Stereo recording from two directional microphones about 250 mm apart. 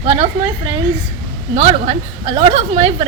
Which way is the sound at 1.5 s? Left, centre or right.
Right.